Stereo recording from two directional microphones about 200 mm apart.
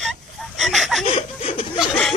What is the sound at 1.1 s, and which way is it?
Speech, 35° left (ahead or behind).